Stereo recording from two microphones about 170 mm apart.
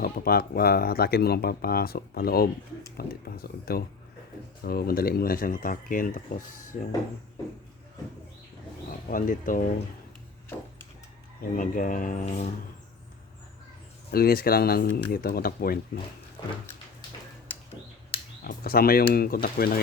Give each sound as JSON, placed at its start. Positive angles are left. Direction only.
{"t": 0.0, "sound": "speech", "side_deg": 60}
{"t": 9.0, "sound": "speech", "side_deg": 55}
{"t": 11.5, "sound": "speech", "side_deg": 50}
{"t": 14.1, "sound": "speech", "side_deg": 65}
{"t": 16.4, "sound": "a sound", "side_deg": 25}
{"t": 18.4, "sound": "speech", "side_deg": 60}